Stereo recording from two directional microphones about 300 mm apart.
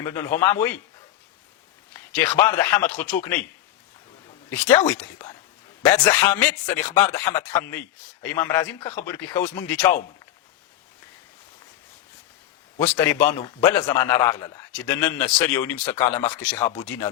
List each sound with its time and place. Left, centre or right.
0.0 s speech: centre
2.1 s speech: centre
2.9 s speech: left
3.2 s speech: centre
4.4 s speech: centre
12.8 s speech: centre